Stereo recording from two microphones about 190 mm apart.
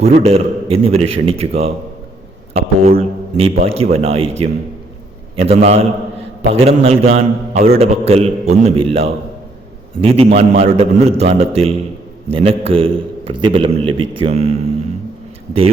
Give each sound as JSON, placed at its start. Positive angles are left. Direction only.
{"t": 0.0, "sound": "a man's voice", "side_deg": -30}